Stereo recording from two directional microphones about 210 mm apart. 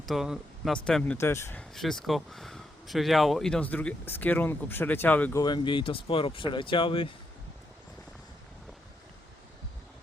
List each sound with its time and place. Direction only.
0.0 s speech: centre (ahead or behind)
1.7 s speech: centre (ahead or behind)
5.4 s speech: 20° left (ahead or behind)